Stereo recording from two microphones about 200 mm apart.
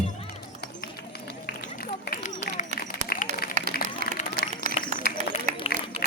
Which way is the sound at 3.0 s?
45° left (ahead or behind).